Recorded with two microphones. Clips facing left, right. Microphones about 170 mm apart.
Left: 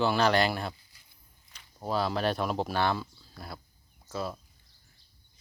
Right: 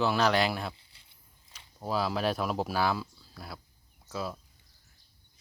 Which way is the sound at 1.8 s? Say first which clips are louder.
Left 1 dB; centre (ahead or behind).